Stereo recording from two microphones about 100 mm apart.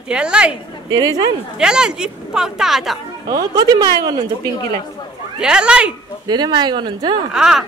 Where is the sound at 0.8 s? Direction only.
40° right (ahead or behind).